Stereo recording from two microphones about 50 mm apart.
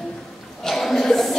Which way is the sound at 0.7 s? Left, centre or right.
Centre.